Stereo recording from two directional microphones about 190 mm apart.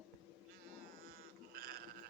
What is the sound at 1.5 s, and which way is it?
Sheep, 55° right (ahead or behind).